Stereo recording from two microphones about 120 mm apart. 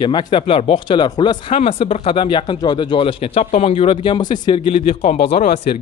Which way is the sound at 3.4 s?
70° left (ahead or behind).